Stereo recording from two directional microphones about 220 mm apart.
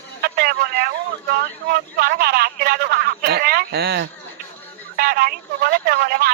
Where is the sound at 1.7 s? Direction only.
45° right (ahead or behind).